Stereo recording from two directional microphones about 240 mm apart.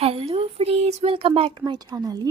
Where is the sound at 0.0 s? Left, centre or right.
Right.